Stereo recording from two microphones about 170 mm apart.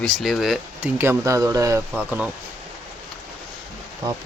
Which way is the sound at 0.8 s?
15° right (ahead or behind).